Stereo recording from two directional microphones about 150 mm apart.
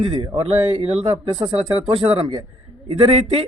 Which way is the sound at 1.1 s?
25° right (ahead or behind).